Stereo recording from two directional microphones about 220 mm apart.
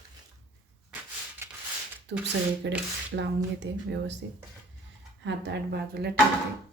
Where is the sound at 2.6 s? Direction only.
55° right (ahead or behind).